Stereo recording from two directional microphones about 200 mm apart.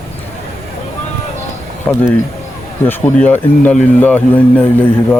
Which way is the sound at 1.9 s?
10° left (ahead or behind).